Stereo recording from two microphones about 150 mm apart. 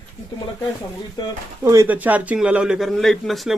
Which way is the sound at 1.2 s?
30° left (ahead or behind).